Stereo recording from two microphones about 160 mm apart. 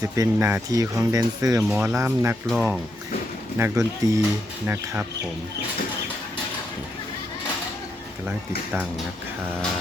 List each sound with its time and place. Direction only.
0.0 s speech: 20° right (ahead or behind); by 2.8 s 5° right (ahead or behind)
3.6 s speech: 20° right (ahead or behind)